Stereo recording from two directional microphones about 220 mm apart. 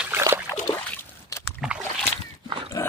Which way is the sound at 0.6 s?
10° left (ahead or behind).